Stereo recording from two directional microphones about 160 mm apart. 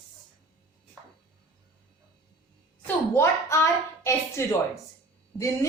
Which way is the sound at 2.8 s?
15° left (ahead or behind).